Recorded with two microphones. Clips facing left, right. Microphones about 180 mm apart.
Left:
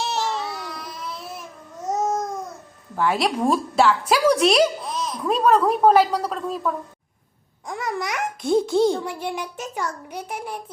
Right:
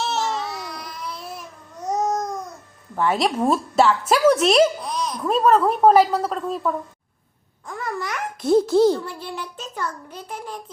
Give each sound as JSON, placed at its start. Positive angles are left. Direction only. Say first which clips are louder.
{"t": 0.3, "sound": "baby cry", "louder": "even", "side_deg": 0}
{"t": 1.8, "sound": "babbling", "louder": "right 1 dB", "side_deg": 0}
{"t": 2.9, "sound": "speech", "louder": "right 1 dB", "side_deg": 0}
{"t": 7.9, "sound": "a child's voice", "louder": "left 1 dB", "side_deg": 15}
{"t": 8.4, "sound": "speech", "louder": "right 3 dB", "side_deg": -5}
{"t": 9.0, "sound": "a child's voice", "louder": "left 4 dB", "side_deg": 15}